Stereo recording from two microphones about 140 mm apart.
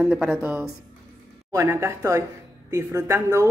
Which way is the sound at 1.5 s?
20° right (ahead or behind).